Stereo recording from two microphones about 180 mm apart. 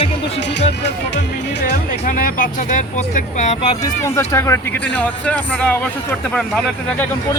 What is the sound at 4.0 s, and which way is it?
Speech, 15° left (ahead or behind).